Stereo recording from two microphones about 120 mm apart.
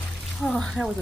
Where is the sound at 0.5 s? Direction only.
Centre (ahead or behind).